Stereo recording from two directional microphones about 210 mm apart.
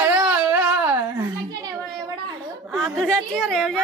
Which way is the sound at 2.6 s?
Centre (ahead or behind).